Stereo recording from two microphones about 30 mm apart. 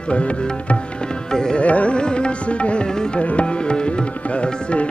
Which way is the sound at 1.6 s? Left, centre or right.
Left.